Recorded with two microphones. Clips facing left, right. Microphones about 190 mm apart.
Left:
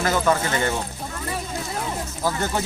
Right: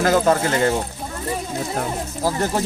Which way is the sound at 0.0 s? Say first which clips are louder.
Right 4 dB; 50° right (ahead or behind).